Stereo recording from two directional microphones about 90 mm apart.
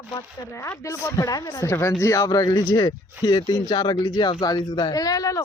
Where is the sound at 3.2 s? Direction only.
50° left (ahead or behind).